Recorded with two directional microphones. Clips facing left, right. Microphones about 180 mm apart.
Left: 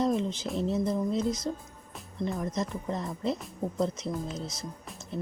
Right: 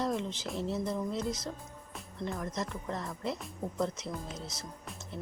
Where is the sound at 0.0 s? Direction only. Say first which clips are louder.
Left 6 dB; 20° left (ahead or behind).